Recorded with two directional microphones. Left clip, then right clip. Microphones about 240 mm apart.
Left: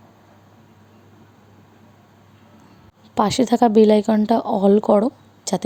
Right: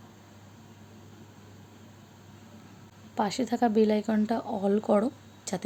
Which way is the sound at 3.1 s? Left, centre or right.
Left.